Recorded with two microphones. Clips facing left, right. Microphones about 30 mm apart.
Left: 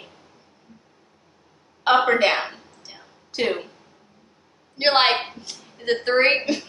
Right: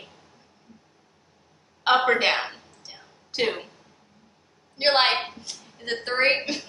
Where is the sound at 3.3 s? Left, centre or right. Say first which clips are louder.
Left 1 dB; centre.